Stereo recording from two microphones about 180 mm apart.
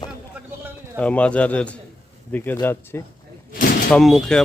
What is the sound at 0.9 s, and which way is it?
A man's voice, 5° left (ahead or behind).